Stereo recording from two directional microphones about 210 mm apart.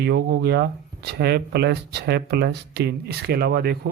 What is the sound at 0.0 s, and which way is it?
Speech, 50° right (ahead or behind).